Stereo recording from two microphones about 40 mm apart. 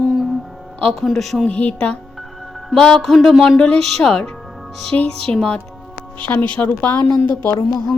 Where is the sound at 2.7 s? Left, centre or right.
Centre.